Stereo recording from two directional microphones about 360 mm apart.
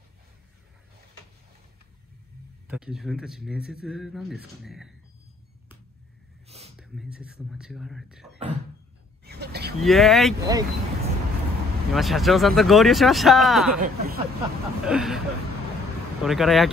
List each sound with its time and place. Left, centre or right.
2.7 s speech: centre
6.4 s a sound: centre
6.8 s speech: centre
9.2 s a sound: right
9.8 s speech: centre
11.9 s speech: centre
13.7 s speech: right
14.9 s speech: centre